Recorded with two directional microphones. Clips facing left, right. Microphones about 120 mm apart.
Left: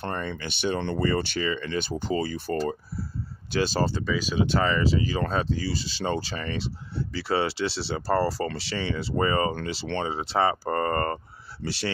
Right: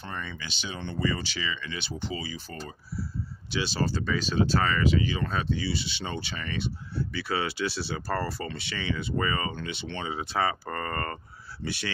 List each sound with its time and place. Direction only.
0.0 s speech: 55° left (ahead or behind)
1.0 s speech: 50° left (ahead or behind)
3.5 s speech: 45° left (ahead or behind)
4.0 s speech: 10° left (ahead or behind)
4.8 s speech: 35° left (ahead or behind)
11.6 s speech: 55° left (ahead or behind)